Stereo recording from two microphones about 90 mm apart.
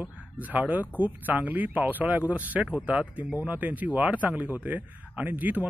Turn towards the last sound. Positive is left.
turn(degrees=-20)  # may be behind; listen again after turning